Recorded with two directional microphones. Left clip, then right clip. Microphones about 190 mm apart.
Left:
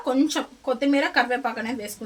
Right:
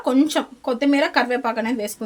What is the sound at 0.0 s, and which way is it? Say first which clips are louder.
Speech: right 4 dB; 50° right (ahead or behind).